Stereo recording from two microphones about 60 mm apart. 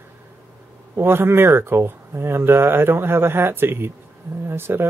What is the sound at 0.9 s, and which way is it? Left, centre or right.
Speech, right.